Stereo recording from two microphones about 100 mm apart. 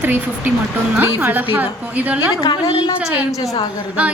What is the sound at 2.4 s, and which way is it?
Speech, 65° left (ahead or behind).